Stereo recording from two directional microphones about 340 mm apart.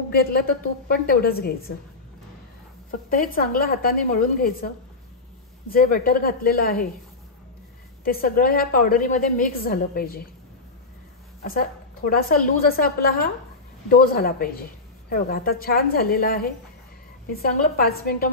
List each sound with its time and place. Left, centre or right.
0.1 s a woman's voice: left
2.9 s a woman's voice: left
8.0 s a woman's voice: left
11.4 s a woman's voice: left